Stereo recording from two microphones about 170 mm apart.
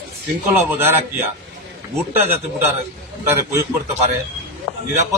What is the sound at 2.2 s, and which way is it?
A man's voice, 15° right (ahead or behind).